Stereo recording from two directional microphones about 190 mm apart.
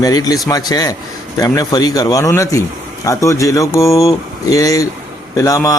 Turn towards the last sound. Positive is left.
turn(degrees=15)  # may be behind; listen again after turning